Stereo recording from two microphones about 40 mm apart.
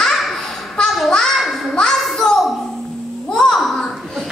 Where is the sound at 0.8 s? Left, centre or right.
Left.